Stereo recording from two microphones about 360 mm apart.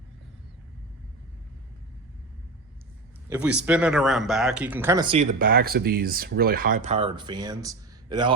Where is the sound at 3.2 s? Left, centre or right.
Centre.